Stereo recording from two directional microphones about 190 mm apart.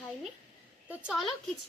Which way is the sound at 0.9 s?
5° right (ahead or behind).